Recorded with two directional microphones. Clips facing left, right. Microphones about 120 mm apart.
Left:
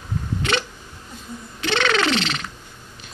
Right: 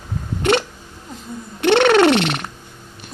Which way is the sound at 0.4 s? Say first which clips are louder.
Right 8 dB; 55° right (ahead or behind).